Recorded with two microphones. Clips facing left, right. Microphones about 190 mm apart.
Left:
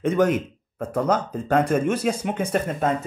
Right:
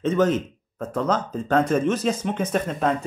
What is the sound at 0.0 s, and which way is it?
Speech, 10° left (ahead or behind).